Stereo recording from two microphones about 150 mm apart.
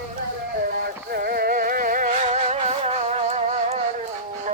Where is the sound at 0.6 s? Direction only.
90° right.